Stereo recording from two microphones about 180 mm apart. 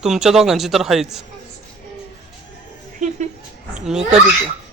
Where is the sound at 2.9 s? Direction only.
45° right (ahead or behind).